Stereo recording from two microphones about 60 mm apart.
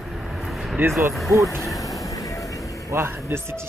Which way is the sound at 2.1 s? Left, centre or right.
Left.